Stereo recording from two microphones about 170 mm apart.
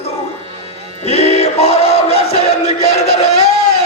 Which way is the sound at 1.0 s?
40° left (ahead or behind).